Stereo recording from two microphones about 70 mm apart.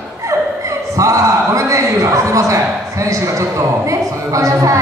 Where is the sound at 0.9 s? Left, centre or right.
Right.